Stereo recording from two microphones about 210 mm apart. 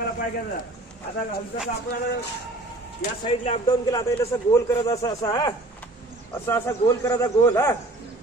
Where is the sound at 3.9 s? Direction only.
15° left (ahead or behind).